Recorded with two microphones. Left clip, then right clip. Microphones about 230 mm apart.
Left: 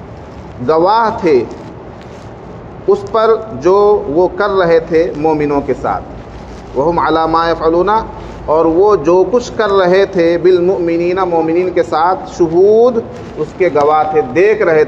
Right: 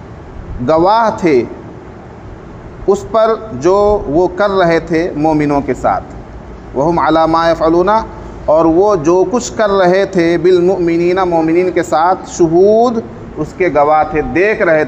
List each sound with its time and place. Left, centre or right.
0.7 s a man's voice: right
2.9 s a man's voice: right